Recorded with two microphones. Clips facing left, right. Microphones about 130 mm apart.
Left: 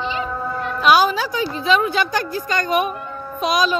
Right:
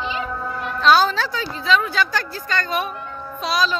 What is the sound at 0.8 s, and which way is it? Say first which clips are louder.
A woman's voice: left 1 dB; 10° left (ahead or behind).